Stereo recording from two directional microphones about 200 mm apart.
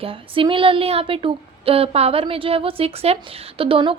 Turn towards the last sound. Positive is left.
turn(degrees=-25)  # may be behind; listen again after turning